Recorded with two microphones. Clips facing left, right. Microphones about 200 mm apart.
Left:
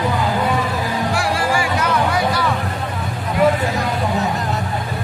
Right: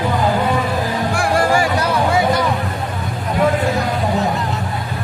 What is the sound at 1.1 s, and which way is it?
Music, 50° right (ahead or behind).